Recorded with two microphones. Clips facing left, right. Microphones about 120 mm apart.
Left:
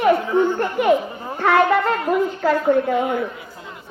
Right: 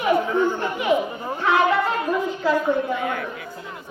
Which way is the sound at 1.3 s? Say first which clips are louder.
Left 3 dB; 55° left (ahead or behind).